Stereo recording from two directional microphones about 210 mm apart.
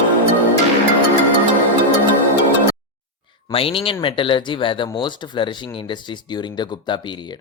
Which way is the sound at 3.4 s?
25° left (ahead or behind).